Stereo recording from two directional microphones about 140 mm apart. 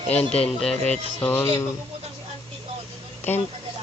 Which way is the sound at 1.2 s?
15° left (ahead or behind).